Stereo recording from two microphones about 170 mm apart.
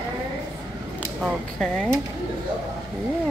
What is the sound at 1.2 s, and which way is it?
Speech, centre (ahead or behind).